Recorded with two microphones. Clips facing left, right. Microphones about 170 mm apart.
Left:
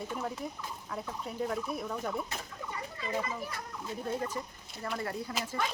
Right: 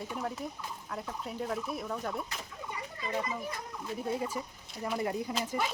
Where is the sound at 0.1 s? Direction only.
Centre (ahead or behind).